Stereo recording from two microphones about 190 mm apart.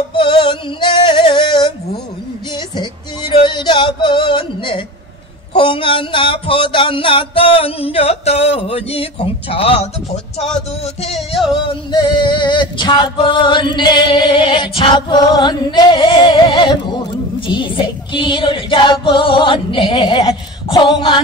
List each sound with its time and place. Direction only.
0.1 s music: 25° left (ahead or behind)
5.5 s male singing: 25° left (ahead or behind)
11.0 s music: 30° left (ahead or behind)
11.5 s male singing: 25° left (ahead or behind)